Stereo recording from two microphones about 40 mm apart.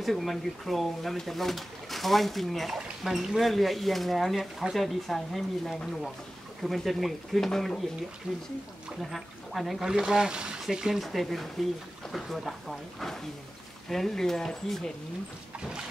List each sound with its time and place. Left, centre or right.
0.0 s speech: centre
8.3 s speech: centre
9.8 s speech: centre
11.0 s speech: centre